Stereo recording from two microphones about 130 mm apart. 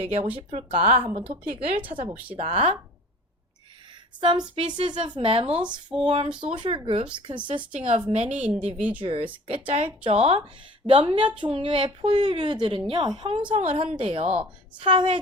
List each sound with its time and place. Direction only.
0.0 s speech: 50° right (ahead or behind)
2.0 s a sound: 10° right (ahead or behind)
2.3 s speech: 50° right (ahead or behind)
4.5 s a woman's voice: 40° right (ahead or behind)
5.6 s a sound: 5° right (ahead or behind)
6.1 s a woman's voice: 40° right (ahead or behind)
8.1 s a woman's voice: 60° right (ahead or behind)
9.0 s a woman's voice: 45° right (ahead or behind)